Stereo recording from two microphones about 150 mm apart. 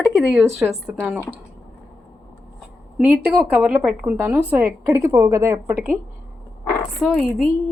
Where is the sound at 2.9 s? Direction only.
10° right (ahead or behind).